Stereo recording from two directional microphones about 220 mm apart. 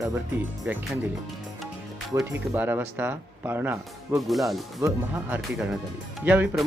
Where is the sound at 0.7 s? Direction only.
10° right (ahead or behind).